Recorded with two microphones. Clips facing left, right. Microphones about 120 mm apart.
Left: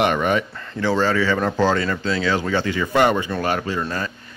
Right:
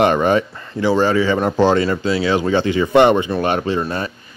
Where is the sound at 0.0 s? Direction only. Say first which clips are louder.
Right 5 dB; 30° right (ahead or behind).